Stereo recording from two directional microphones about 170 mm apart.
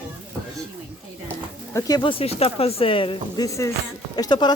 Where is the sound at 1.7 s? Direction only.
20° left (ahead or behind).